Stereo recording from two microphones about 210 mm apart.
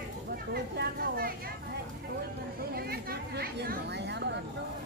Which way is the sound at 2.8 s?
45° right (ahead or behind).